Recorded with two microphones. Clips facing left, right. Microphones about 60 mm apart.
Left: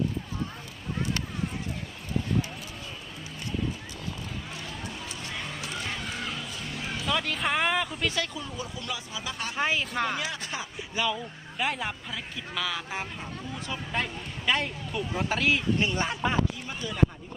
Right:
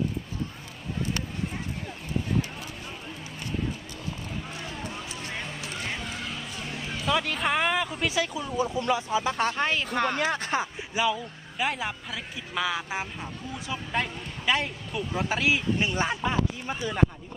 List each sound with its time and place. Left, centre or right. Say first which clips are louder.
7.0 s speech: right 3 dB; centre
8.5 s speech: right 14 dB; right
9.6 s speech: right 1 dB; centre
10.2 s speech: right 7 dB; right
10.9 s speech: right 3 dB; centre
12.5 s speech: right 4 dB; centre
13.7 s speech: right 2 dB; centre
16.6 s speech: right 4 dB; right